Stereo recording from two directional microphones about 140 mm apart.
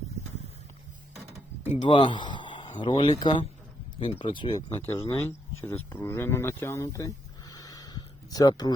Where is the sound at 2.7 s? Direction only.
35° left (ahead or behind).